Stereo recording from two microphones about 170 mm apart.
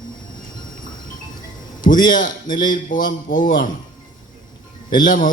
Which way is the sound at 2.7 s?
55° left (ahead or behind).